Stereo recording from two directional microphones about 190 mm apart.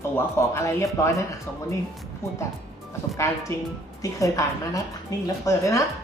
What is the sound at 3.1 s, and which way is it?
A woman's voice, 15° left (ahead or behind).